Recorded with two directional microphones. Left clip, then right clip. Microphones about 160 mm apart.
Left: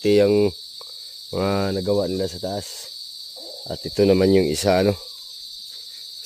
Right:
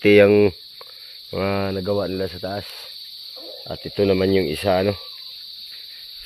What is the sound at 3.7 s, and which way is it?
Cricket, 50° left (ahead or behind).